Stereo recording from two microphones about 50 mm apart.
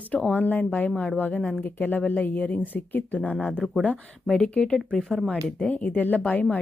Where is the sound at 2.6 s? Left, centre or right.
Left.